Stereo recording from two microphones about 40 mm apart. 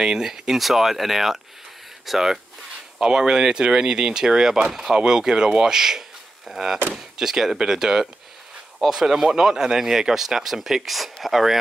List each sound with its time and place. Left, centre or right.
0.0 s speech: centre
3.0 s speech: centre